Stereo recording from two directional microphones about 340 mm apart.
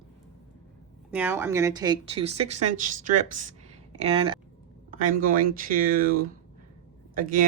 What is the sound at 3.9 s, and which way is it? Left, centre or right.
Speech, centre.